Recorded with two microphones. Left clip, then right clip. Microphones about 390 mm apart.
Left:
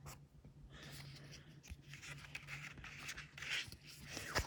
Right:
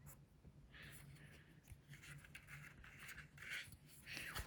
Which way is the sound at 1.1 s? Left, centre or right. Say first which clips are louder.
Left 6 dB; centre.